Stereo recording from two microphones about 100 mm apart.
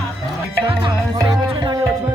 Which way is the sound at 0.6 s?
50° right (ahead or behind).